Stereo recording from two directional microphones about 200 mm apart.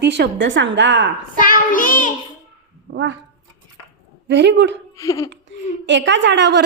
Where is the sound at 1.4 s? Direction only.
45° left (ahead or behind).